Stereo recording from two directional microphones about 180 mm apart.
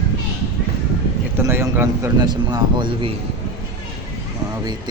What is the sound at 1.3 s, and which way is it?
A man's voice, 15° right (ahead or behind).